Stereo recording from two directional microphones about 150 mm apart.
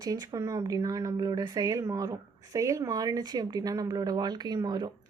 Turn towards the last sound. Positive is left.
turn(degrees=-25)  # may be behind; listen again after turning